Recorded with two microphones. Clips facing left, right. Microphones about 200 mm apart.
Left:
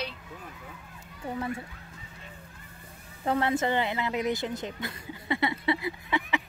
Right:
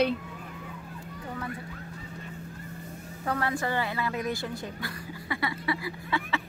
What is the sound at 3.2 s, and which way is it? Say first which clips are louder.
Speech: left 3 dB; 25° left (ahead or behind).